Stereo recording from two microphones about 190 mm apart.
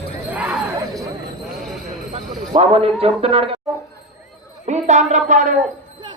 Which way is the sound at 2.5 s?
30° right (ahead or behind).